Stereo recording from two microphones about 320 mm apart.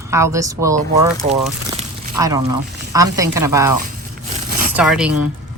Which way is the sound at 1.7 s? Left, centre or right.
Centre.